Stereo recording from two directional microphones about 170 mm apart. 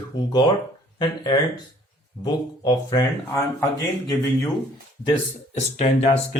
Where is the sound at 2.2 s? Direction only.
25° left (ahead or behind).